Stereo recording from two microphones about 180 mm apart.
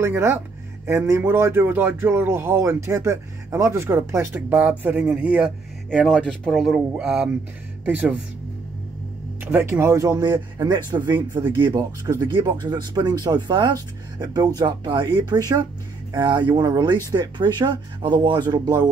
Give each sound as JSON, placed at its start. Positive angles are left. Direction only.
{"t": 0.0, "sound": "a man's voice", "side_deg": -15}
{"t": 9.4, "sound": "speech", "side_deg": -10}